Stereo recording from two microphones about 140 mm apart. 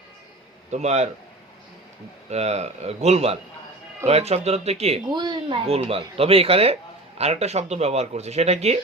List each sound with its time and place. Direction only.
0.7 s speech: 55° right (ahead or behind)
2.3 s speech: 50° right (ahead or behind)
5.1 s speech: 30° right (ahead or behind)
5.6 s speech: 45° right (ahead or behind)